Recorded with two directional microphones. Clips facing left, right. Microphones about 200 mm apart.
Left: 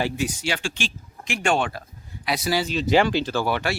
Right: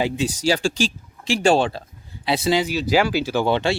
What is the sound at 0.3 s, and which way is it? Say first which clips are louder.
Speech: right 7 dB; 35° right (ahead or behind).